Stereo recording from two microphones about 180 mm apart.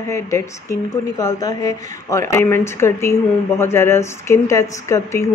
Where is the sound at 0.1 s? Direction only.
15° left (ahead or behind).